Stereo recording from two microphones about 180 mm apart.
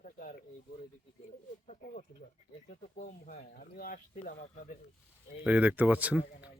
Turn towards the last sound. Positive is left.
turn(degrees=-5)  # may be behind; listen again after turning